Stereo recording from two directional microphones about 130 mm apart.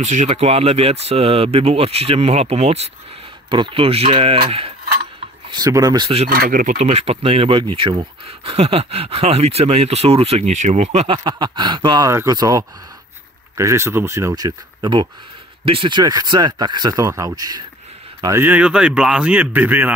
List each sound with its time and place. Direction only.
0.0 s speech: 65° right (ahead or behind)
3.4 s speech: 35° right (ahead or behind)
5.5 s speech: 30° right (ahead or behind)
6.2 s speech: 90° right
6.8 s speech: 55° right (ahead or behind)
10.5 s speech: 65° right (ahead or behind)
11.1 s speech: 35° right (ahead or behind)
12.1 s speech: 25° right (ahead or behind)
18.4 s speech: 10° right (ahead or behind)